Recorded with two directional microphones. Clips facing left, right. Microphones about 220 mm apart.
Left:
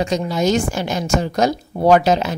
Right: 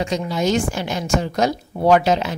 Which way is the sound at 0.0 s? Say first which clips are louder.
Left 2 dB; 40° left (ahead or behind).